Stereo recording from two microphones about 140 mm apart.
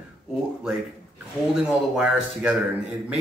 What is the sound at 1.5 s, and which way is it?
Speech, 5° right (ahead or behind).